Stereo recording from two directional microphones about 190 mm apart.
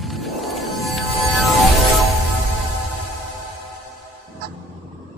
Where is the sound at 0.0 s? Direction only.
Centre (ahead or behind).